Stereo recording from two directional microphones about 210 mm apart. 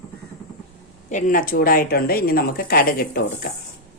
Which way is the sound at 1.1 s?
40° left (ahead or behind).